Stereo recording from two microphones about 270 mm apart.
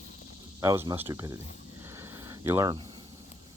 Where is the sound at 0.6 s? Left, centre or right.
Centre.